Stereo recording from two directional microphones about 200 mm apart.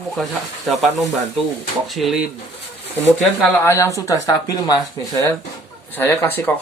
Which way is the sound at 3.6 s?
15° left (ahead or behind).